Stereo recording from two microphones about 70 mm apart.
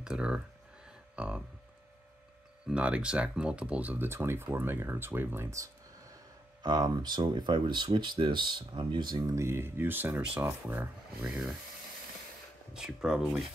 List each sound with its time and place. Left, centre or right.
0.0 s speech: centre
2.7 s speech: centre; by 5.5 s right
6.6 s speech: right
9.3 s speech: right
11.2 s speech: centre
12.7 s speech: centre